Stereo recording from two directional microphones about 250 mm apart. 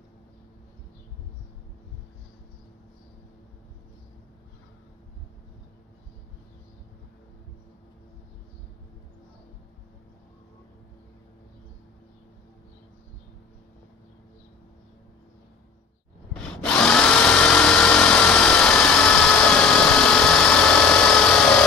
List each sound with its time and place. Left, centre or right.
16.3 s drill: centre